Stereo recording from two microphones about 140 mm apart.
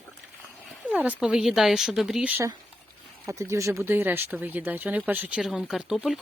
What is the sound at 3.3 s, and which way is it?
A woman's voice, 20° right (ahead or behind).